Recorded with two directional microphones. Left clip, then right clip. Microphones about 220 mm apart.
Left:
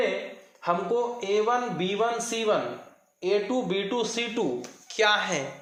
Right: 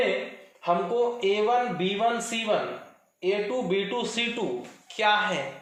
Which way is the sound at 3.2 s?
25° left (ahead or behind).